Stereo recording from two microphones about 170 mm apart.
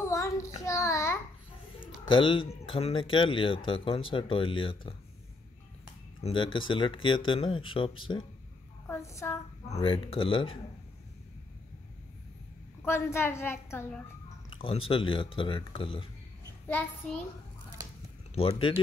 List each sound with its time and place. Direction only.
0.0 s child singing: 20° left (ahead or behind)
2.0 s speech: 30° left (ahead or behind)
6.2 s speech: 30° left (ahead or behind)
8.8 s a woman's voice: 15° left (ahead or behind)
9.7 s speech: 35° left (ahead or behind)
12.8 s a woman's voice: 15° left (ahead or behind)
14.5 s speech: 30° left (ahead or behind)
16.6 s a woman's voice: 10° left (ahead or behind)
18.3 s speech: 35° left (ahead or behind)